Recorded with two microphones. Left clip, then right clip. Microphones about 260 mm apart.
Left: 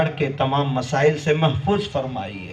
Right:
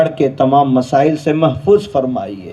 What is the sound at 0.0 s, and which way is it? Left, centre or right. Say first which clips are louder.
Speech: right 9 dB; right.